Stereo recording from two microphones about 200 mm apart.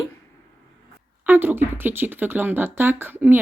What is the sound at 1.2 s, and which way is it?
Speech, 10° right (ahead or behind).